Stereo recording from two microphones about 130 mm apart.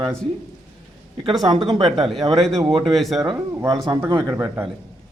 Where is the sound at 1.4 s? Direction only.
35° right (ahead or behind).